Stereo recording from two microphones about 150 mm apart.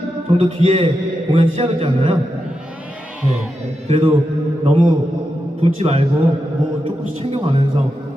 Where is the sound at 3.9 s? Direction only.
40° right (ahead or behind).